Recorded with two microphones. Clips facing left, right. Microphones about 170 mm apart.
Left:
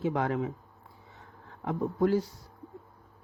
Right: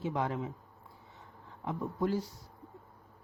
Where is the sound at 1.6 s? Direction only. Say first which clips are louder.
Left 6 dB; 75° left (ahead or behind).